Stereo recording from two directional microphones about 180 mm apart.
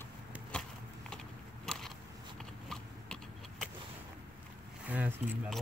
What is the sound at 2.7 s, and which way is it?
Vehicle, centre (ahead or behind).